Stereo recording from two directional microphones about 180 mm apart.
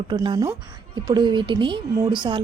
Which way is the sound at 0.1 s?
25° right (ahead or behind).